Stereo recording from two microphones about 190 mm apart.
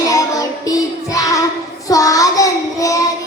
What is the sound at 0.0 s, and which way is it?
Child singing, 20° left (ahead or behind).